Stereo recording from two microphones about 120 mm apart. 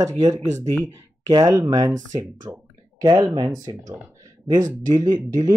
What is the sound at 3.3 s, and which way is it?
Speech, 35° right (ahead or behind).